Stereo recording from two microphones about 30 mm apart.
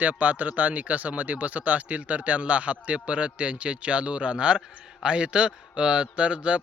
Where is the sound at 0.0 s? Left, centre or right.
Right.